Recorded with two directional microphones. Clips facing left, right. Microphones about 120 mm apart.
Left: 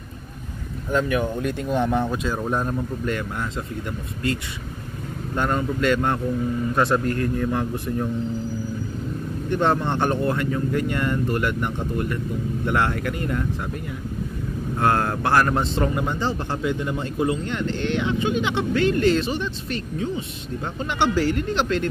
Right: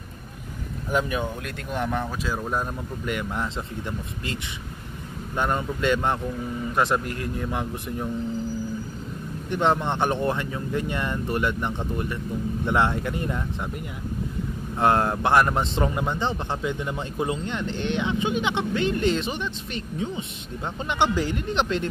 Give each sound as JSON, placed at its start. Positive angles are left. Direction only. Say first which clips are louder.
{"t": 0.9, "sound": "speech", "louder": "left 3 dB", "side_deg": -20}
{"t": 1.4, "sound": "speech", "louder": "left 7 dB", "side_deg": 0}
{"t": 3.2, "sound": "speech", "louder": "even", "side_deg": -20}
{"t": 5.3, "sound": "speech", "louder": "left 2 dB", "side_deg": -15}
{"t": 9.5, "sound": "speech", "louder": "left 1 dB", "side_deg": -15}
{"t": 14.8, "sound": "speech", "louder": "right 1 dB", "side_deg": -25}